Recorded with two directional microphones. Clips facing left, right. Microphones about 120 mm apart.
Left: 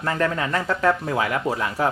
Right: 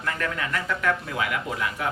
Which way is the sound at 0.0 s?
30° left (ahead or behind).